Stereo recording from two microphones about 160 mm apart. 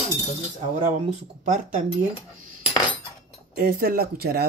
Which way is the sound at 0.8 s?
50° right (ahead or behind).